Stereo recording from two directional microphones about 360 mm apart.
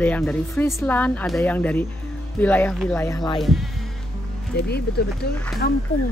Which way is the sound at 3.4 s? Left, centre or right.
Centre.